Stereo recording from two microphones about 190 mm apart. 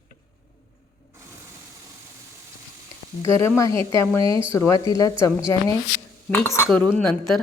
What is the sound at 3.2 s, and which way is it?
A woman's voice, 15° left (ahead or behind).